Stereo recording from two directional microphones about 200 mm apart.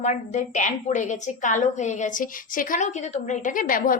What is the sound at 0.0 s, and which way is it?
A woman's voice, 35° left (ahead or behind).